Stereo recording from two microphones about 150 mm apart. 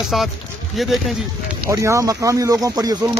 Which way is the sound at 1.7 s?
20° right (ahead or behind).